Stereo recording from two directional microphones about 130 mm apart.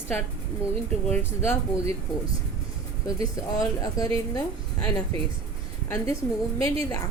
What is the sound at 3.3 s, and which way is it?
A woman's voice, 25° left (ahead or behind).